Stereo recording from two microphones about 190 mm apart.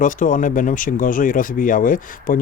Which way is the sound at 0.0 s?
45° left (ahead or behind).